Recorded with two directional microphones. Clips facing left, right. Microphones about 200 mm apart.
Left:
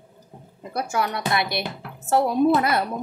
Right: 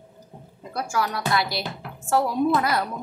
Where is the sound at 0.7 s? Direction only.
25° left (ahead or behind).